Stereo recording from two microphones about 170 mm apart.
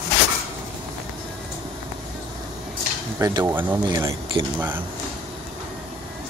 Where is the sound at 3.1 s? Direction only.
20° right (ahead or behind).